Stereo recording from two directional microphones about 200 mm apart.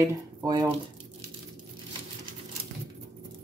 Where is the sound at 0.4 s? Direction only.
20° right (ahead or behind).